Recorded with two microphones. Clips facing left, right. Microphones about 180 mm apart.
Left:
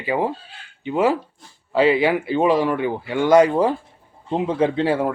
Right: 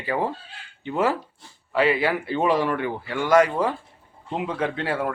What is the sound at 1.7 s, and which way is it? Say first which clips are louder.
Speech: left 5 dB; 25° left (ahead or behind).